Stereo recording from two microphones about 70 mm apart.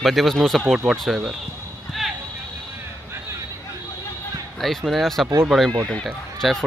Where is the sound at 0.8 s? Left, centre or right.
Centre.